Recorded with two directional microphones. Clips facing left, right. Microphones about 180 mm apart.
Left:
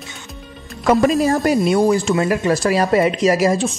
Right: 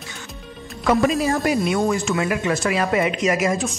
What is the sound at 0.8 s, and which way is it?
Speech, 45° left (ahead or behind).